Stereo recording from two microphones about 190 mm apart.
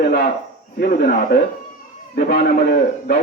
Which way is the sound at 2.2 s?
50° left (ahead or behind).